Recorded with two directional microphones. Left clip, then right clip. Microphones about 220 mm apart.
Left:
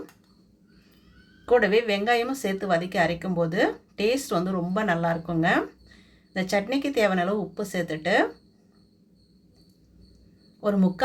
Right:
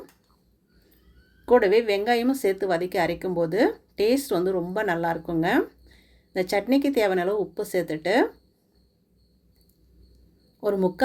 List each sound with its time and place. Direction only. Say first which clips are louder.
1.5 s a woman's voice: right 2 dB; 40° right (ahead or behind)
10.6 s a woman's voice: right 2 dB; 40° right (ahead or behind)